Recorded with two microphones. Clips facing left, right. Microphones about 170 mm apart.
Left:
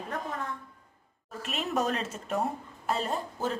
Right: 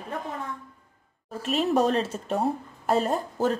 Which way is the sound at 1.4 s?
35° right (ahead or behind).